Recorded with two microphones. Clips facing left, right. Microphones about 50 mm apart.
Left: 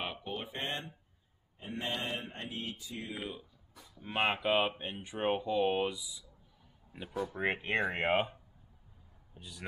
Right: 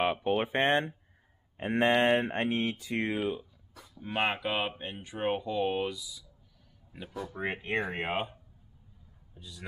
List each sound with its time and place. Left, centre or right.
0.0 s speech: right
0.3 s speech: right
1.9 s mantra: right
4.0 s speech: centre
5.9 s speech: centre
7.3 s speech: left
8.1 s speech: centre
9.3 s speech: left